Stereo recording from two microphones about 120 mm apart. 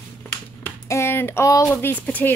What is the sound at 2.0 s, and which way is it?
Speech, 15° left (ahead or behind).